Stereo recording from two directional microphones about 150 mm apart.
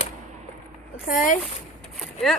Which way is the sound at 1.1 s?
60° left (ahead or behind).